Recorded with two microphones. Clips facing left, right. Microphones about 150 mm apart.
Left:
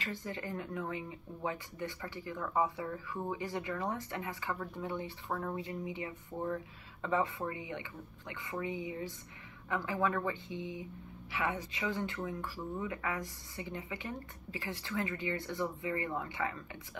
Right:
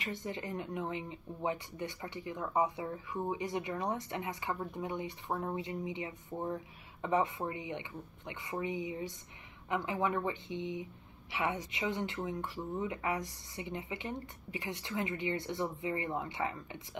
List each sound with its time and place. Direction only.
0.0 s speech: 20° right (ahead or behind)